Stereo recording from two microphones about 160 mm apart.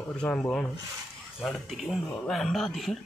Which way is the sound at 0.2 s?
10° left (ahead or behind).